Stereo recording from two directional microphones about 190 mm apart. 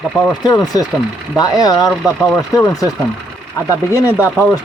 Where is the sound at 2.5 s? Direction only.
15° left (ahead or behind).